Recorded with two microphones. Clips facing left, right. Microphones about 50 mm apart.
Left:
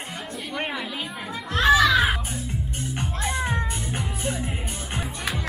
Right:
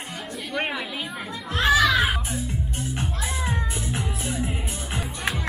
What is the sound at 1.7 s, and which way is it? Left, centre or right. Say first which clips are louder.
Music: left 2 dB; centre.